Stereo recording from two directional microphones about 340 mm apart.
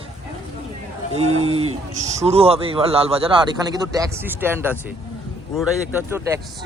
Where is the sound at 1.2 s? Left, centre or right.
Centre.